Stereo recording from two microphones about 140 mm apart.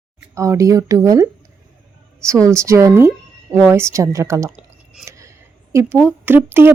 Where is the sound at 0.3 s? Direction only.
20° right (ahead or behind).